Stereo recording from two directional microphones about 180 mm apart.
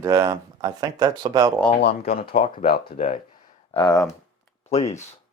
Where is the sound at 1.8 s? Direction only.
60° left (ahead or behind).